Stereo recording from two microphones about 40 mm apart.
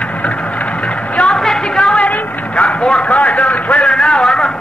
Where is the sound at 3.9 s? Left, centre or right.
Left.